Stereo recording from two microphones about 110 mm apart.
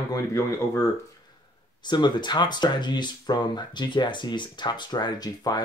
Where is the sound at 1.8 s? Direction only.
45° left (ahead or behind).